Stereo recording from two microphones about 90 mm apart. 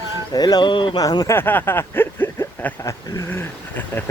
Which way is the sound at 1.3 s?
20° left (ahead or behind).